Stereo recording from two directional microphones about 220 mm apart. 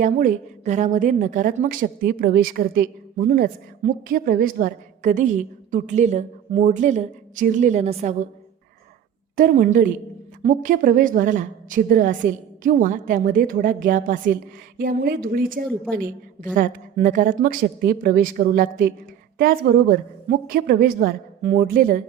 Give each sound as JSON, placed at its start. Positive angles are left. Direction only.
{"t": 0.0, "sound": "a woman's voice", "side_deg": -35}
{"t": 9.3, "sound": "a woman's voice", "side_deg": -40}